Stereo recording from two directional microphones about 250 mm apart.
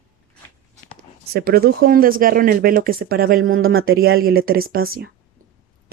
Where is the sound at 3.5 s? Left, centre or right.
Right.